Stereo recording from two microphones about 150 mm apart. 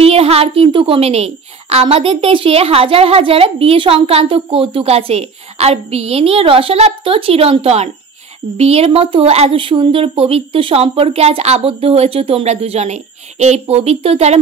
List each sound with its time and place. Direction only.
0.0 s a woman's voice: 40° right (ahead or behind)